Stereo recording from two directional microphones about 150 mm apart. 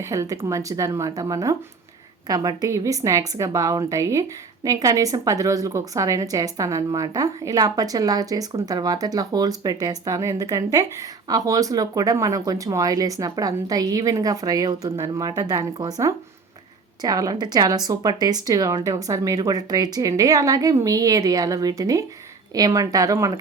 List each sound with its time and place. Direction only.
0.1 s a woman's voice: 20° right (ahead or behind)